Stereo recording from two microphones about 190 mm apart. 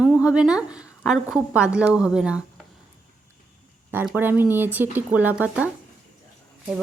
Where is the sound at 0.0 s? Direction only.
5° right (ahead or behind).